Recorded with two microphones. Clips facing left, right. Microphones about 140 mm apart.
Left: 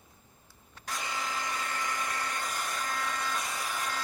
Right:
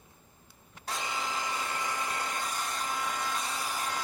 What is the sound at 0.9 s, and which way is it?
Hair dryer, 25° right (ahead or behind).